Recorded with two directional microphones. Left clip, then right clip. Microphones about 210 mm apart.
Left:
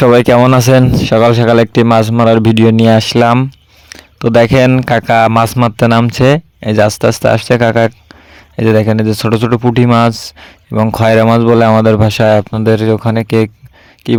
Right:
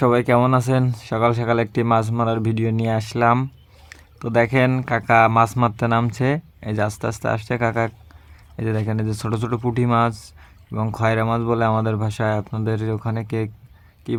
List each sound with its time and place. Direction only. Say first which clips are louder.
0.0 s speech: left 11 dB; 45° left (ahead or behind)